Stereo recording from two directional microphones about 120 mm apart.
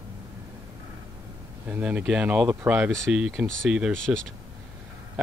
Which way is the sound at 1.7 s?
10° right (ahead or behind).